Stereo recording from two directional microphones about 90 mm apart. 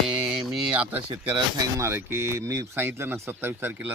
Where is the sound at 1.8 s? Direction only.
30° right (ahead or behind).